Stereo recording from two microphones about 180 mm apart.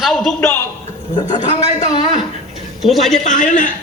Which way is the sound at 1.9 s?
30° left (ahead or behind).